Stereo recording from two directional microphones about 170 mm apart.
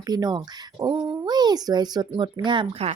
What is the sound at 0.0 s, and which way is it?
Speech, 25° right (ahead or behind).